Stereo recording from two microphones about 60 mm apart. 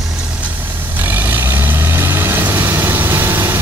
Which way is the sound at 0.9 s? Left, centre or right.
Right.